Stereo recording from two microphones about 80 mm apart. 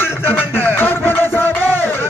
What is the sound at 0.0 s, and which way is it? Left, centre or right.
Music, left.